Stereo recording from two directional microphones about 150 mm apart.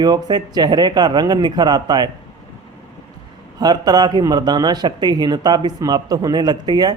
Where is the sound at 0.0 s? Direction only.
25° right (ahead or behind).